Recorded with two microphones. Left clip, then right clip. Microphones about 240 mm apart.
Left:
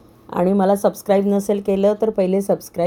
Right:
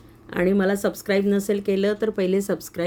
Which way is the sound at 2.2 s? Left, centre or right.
Centre.